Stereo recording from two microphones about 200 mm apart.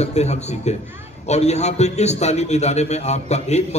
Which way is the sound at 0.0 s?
35° left (ahead or behind).